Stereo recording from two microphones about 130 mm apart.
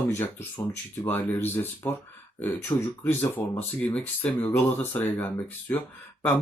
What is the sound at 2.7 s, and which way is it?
Speech, 25° left (ahead or behind).